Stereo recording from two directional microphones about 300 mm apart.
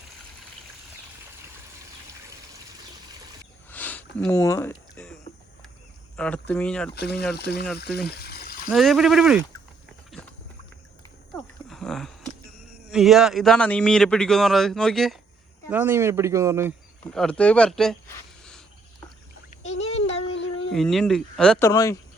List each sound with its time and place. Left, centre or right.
3.7 s a sound: centre
6.1 s a man's voice: centre
6.9 s speech: left
7.9 s water: left
8.7 s a man's voice: centre
10.1 s horse: centre
11.7 s a sound: centre
12.9 s a man's voice: centre
17.0 s a man's voice: centre
20.3 s a sound: left
20.7 s a man's voice: centre